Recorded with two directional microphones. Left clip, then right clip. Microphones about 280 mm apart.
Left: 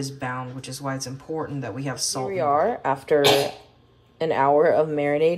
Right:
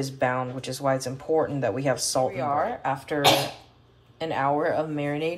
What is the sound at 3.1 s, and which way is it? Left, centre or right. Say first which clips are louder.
Speech: left 3 dB; left.